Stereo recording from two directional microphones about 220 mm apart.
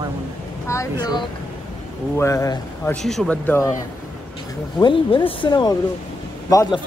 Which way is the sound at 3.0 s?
Centre (ahead or behind).